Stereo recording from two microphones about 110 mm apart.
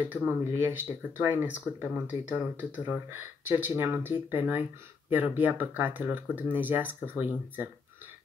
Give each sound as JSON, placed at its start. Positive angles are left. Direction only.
{"t": 0.1, "sound": "speech", "side_deg": -20}